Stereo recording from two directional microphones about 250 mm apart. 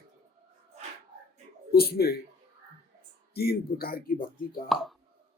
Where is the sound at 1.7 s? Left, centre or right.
Left.